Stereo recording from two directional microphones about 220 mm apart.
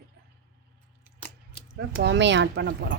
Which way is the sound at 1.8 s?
50° right (ahead or behind).